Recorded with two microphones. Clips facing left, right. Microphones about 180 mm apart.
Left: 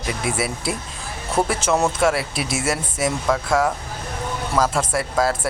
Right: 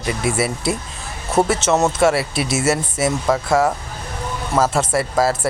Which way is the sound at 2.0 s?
5° right (ahead or behind).